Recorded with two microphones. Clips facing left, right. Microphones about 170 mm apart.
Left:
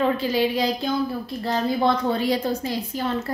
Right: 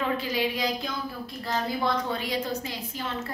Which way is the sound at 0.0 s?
30° left (ahead or behind).